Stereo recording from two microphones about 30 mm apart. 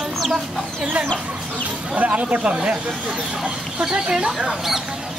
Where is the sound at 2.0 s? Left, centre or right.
Right.